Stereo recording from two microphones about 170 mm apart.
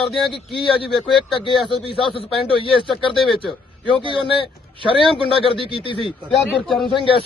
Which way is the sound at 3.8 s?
30° right (ahead or behind).